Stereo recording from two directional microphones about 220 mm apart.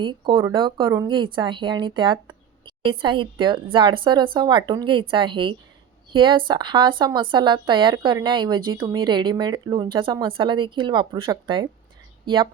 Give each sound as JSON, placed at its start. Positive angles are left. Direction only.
{"t": 0.0, "sound": "a woman's voice", "side_deg": -20}